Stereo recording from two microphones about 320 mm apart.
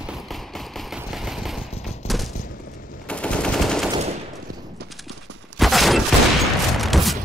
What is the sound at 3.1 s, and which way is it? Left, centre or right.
Machine gun, centre.